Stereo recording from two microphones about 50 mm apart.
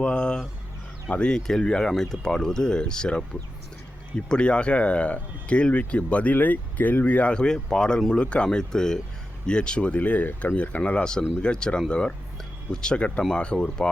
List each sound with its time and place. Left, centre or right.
0.0 s speech: centre
1.3 s speech: centre
4.3 s speech: centre
11.0 s speech: centre